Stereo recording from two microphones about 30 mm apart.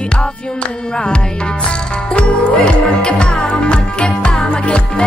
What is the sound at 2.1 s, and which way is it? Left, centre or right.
Music, left.